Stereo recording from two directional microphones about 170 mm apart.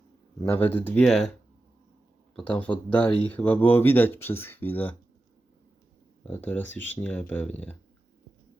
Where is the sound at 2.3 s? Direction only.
10° left (ahead or behind).